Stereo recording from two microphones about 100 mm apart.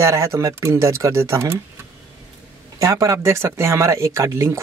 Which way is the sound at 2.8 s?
35° right (ahead or behind).